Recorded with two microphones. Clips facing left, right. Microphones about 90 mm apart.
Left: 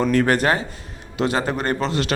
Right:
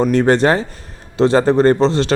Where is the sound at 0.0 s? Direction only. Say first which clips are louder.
Right 5 dB; 20° right (ahead or behind).